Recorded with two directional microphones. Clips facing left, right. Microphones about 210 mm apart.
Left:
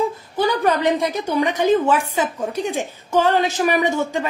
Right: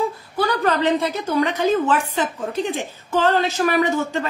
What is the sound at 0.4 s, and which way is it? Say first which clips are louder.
A woman's voice: left 1 dB; 15° left (ahead or behind).